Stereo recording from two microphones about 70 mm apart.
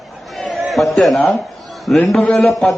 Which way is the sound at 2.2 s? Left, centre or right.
Left.